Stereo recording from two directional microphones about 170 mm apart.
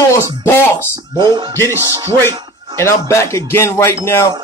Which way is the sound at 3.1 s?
15° left (ahead or behind).